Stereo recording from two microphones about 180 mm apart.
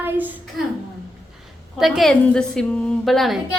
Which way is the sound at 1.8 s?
Centre (ahead or behind).